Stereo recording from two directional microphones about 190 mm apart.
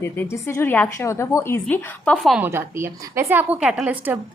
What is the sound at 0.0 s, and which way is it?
A woman's voice, 15° left (ahead or behind).